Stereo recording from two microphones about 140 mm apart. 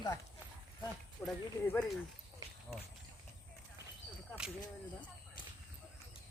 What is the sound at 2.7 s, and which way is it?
Speech, 5° right (ahead or behind).